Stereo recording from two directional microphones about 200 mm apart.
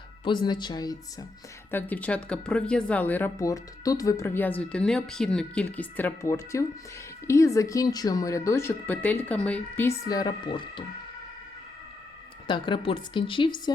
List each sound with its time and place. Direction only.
0.3 s speech: 20° left (ahead or behind)
1.7 s speech: 10° left (ahead or behind); by 10.8 s 25° left (ahead or behind)
12.5 s speech: 25° left (ahead or behind)